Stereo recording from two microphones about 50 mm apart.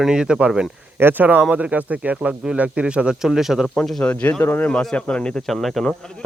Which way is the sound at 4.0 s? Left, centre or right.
Left.